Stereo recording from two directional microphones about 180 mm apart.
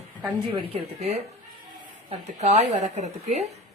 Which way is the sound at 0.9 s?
35° right (ahead or behind).